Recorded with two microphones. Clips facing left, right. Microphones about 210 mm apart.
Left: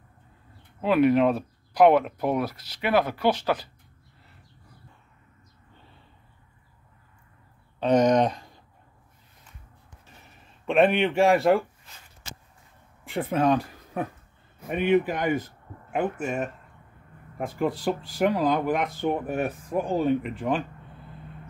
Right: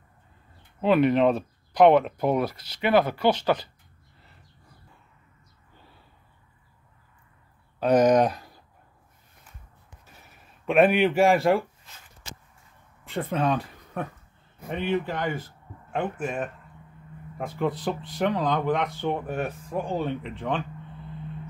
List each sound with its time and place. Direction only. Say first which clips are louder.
0.7 s speech: even; 5° left (ahead or behind)
7.8 s speech: right 1 dB; 5° right (ahead or behind)
10.3 s speech: right 1 dB; 5° right (ahead or behind)
13.1 s speech: left 3 dB; 10° left (ahead or behind)
14.7 s speech: left 5 dB; 15° left (ahead or behind)
16.0 s speech: left 2 dB; centre (ahead or behind)
17.6 s speech: left 1 dB; centre (ahead or behind)